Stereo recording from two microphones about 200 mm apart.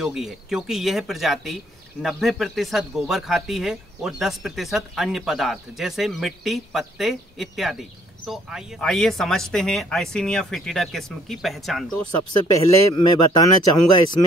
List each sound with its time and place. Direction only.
0.0 s speech: centre (ahead or behind)
12.3 s speech: 20° left (ahead or behind)